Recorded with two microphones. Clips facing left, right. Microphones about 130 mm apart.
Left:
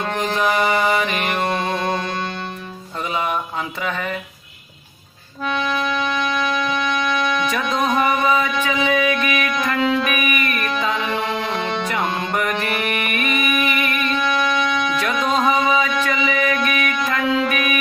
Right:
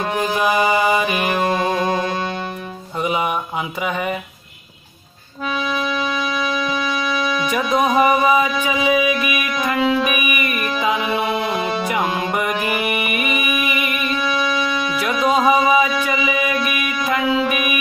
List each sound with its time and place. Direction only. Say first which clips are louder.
0.0 s music: right 1 dB; 10° right (ahead or behind)
5.5 s music: even; centre (ahead or behind)
7.4 s music: right 3 dB; 15° right (ahead or behind)